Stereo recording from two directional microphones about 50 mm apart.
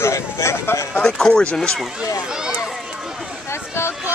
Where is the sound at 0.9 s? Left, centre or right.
Centre.